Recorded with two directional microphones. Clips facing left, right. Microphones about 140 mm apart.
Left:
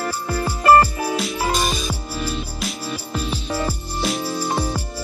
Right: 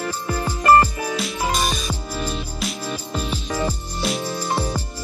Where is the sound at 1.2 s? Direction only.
Centre (ahead or behind).